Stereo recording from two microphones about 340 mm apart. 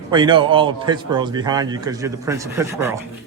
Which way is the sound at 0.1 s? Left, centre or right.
Centre.